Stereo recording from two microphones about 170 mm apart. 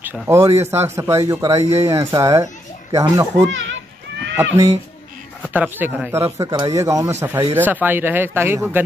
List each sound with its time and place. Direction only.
0.0 s a child's voice: 15° right (ahead or behind)